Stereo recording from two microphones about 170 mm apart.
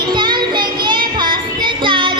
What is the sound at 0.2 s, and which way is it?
Child singing, 25° right (ahead or behind).